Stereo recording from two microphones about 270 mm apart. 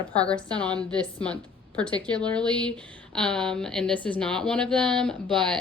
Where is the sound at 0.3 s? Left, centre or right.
Centre.